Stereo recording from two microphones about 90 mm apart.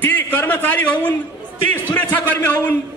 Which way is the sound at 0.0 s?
20° left (ahead or behind).